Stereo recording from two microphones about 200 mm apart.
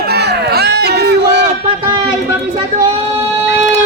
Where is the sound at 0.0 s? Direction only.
55° right (ahead or behind).